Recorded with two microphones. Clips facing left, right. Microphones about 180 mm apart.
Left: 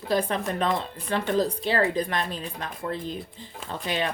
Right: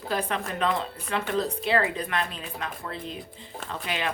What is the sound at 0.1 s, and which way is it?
Speech, 35° left (ahead or behind).